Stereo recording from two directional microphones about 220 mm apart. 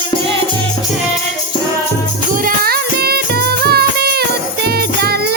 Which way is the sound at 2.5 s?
45° right (ahead or behind).